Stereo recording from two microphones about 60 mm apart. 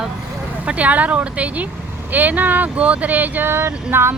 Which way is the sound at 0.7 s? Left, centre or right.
Right.